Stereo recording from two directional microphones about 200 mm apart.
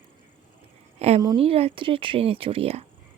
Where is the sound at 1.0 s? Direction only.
30° right (ahead or behind).